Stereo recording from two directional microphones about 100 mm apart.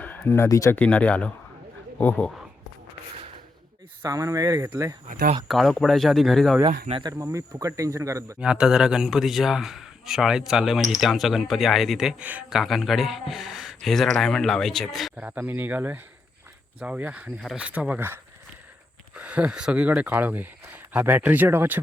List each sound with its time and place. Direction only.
0.4 s speech: 30° left (ahead or behind)
0.8 s speech: 15° left (ahead or behind)
4.0 s speech: 35° right (ahead or behind)
5.5 s speech: centre (ahead or behind)
7.1 s speech: 30° right (ahead or behind)
8.4 s speech: 10° right (ahead or behind)
12.2 s speech: 15° right (ahead or behind)
12.5 s speech: centre (ahead or behind)
15.1 s speech: 15° right (ahead or behind)